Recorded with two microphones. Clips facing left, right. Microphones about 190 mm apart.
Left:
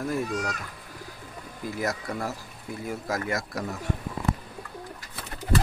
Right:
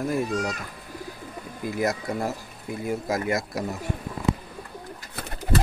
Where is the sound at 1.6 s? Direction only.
20° right (ahead or behind).